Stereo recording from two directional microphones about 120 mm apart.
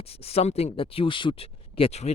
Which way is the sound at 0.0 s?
55° left (ahead or behind).